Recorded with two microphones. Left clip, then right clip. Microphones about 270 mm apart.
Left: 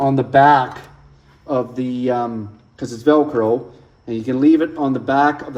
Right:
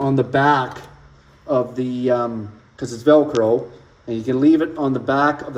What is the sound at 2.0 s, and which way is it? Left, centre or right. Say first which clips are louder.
Speech: right 1 dB; left.